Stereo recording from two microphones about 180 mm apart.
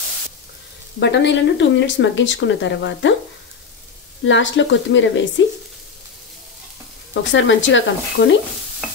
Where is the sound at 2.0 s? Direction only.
90° left.